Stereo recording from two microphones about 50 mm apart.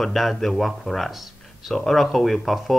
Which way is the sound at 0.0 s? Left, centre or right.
Centre.